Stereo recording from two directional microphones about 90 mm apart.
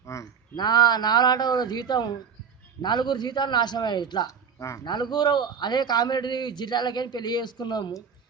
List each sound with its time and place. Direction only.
0.0 s a sound: 35° left (ahead or behind)
0.5 s a man's voice: 50° left (ahead or behind)
4.3 s speech: 35° left (ahead or behind)
4.9 s a man's voice: 55° left (ahead or behind)